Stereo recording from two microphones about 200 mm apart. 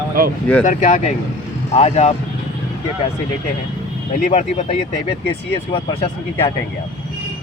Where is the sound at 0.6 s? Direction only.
40° left (ahead or behind).